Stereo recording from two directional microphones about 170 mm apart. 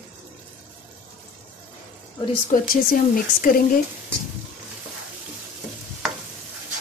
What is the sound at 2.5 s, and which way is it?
A woman's voice, 55° left (ahead or behind).